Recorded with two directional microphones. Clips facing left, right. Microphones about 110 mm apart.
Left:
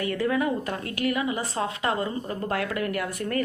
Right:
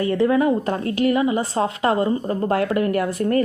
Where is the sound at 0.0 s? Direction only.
30° right (ahead or behind).